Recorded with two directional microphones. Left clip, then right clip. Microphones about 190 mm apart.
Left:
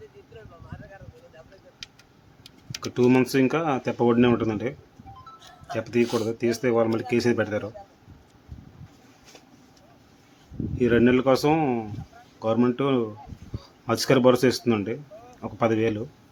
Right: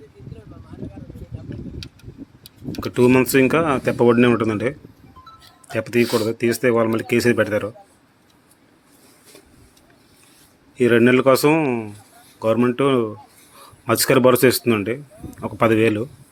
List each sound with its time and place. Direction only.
2.9 s speech: 10° right (ahead or behind)
5.7 s speech: 15° right (ahead or behind)
10.8 s speech: 15° right (ahead or behind)